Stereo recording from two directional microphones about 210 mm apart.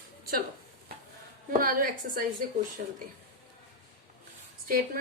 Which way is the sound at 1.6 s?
40° right (ahead or behind).